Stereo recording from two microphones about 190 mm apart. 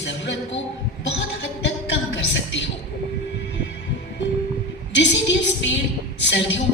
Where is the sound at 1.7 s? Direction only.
70° left (ahead or behind).